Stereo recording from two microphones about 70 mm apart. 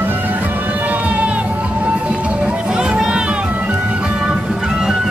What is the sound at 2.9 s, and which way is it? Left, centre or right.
Children playing, centre.